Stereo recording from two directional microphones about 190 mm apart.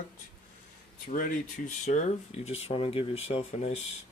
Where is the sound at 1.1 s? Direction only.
45° left (ahead or behind).